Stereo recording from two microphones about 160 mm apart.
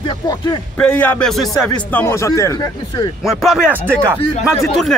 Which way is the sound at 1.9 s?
15° left (ahead or behind).